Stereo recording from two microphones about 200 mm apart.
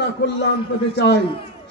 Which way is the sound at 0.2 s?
55° left (ahead or behind).